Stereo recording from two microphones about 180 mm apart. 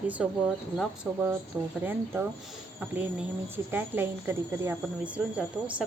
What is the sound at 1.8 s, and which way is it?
Speech, 10° right (ahead or behind).